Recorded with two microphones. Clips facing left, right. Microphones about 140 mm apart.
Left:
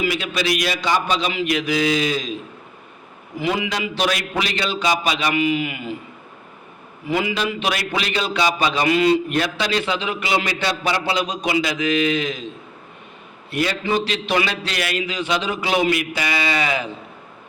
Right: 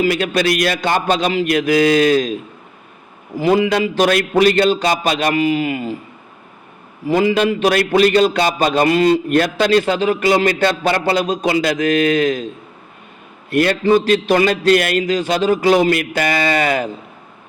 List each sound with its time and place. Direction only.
0.0 s a man's voice: 50° right (ahead or behind)
3.3 s a man's voice: 40° right (ahead or behind)
7.1 s a man's voice: 45° right (ahead or behind)
13.5 s a man's voice: 60° right (ahead or behind)
13.8 s a man's voice: 45° right (ahead or behind)